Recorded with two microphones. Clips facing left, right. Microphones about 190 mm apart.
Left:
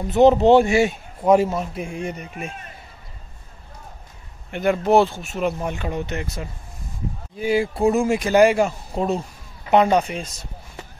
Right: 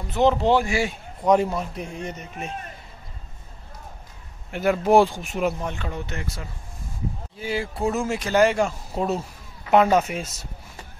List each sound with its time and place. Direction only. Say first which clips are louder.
0.1 s speech: left 6 dB; 20° left (ahead or behind)
1.2 s speech: left 3 dB; 5° left (ahead or behind)
4.5 s speech: left 1 dB; 5° right (ahead or behind)
5.6 s speech: left 4 dB; 15° left (ahead or behind); by 10.3 s 5° right (ahead or behind)